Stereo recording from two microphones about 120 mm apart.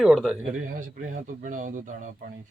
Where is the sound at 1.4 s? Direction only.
90° right.